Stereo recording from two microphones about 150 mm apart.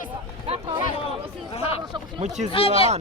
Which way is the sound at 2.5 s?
40° left (ahead or behind).